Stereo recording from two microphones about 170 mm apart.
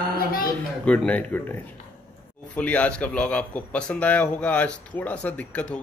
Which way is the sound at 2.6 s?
10° left (ahead or behind).